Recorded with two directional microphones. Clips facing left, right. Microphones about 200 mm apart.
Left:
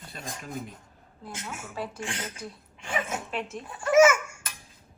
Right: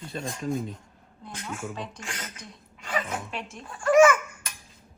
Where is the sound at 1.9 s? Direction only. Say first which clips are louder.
Left 4 dB; 30° left (ahead or behind).